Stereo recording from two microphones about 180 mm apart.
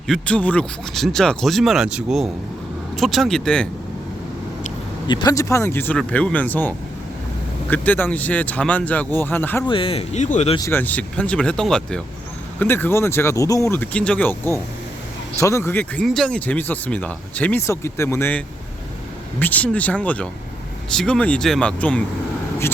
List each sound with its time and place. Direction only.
0.1 s speech: 5° left (ahead or behind)
5.0 s speech: 25° left (ahead or behind)
9.6 s speech: 30° left (ahead or behind)
10.7 s speech: 10° left (ahead or behind)